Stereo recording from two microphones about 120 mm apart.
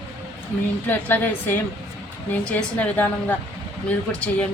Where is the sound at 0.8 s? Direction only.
15° left (ahead or behind).